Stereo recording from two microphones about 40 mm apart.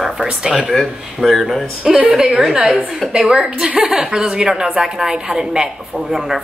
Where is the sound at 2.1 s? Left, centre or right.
Centre.